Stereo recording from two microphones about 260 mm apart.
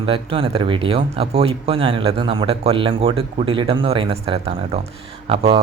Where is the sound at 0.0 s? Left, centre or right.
Right.